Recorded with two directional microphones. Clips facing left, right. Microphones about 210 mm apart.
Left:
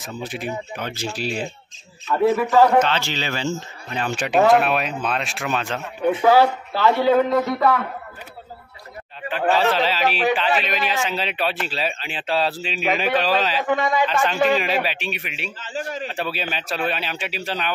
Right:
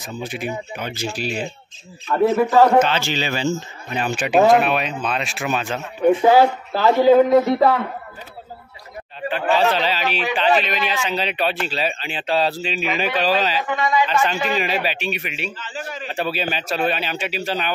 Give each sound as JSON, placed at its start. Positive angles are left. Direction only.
{"t": 0.0, "sound": "a man's voice", "side_deg": 0}
{"t": 6.7, "sound": "a man's voice", "side_deg": -40}
{"t": 7.1, "sound": "a man's voice", "side_deg": -15}
{"t": 9.6, "sound": "speech", "side_deg": 0}
{"t": 13.7, "sound": "speech", "side_deg": 55}
{"t": 14.0, "sound": "speech", "side_deg": 0}
{"t": 15.6, "sound": "a man's voice", "side_deg": 40}
{"t": 16.1, "sound": "speech", "side_deg": 0}